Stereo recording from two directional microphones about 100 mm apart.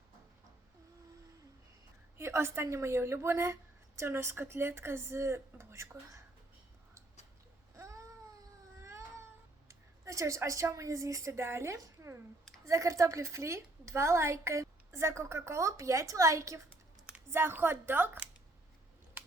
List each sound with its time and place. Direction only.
2.1 s a woman's voice: 25° right (ahead or behind)
7.8 s a sound: 30° right (ahead or behind)
8.8 s baby cry: 30° right (ahead or behind)
9.6 s a woman's voice: 30° right (ahead or behind)